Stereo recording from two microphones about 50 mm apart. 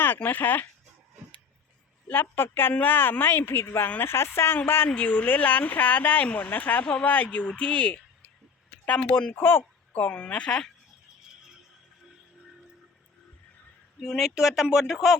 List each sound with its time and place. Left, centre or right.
0.2 s speech: left
2.0 s speech: left
4.9 s speech: left
9.3 s speech: left
9.9 s speech: left
14.0 s speech: centre